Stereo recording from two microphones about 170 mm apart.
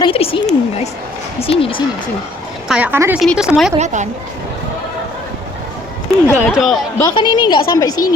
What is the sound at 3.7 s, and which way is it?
Speech, 45° right (ahead or behind).